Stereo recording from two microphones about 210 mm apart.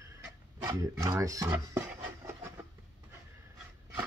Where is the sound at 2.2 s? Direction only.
10° right (ahead or behind).